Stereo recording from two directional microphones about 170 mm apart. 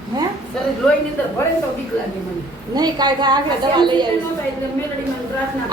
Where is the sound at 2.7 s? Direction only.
25° right (ahead or behind).